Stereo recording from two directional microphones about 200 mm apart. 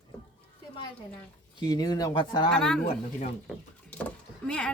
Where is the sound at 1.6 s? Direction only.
20° left (ahead or behind).